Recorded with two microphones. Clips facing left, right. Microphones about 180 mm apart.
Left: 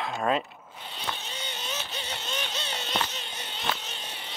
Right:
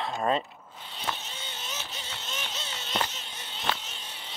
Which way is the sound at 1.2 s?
70° left (ahead or behind).